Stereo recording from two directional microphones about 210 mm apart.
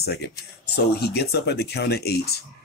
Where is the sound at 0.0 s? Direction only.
50° left (ahead or behind).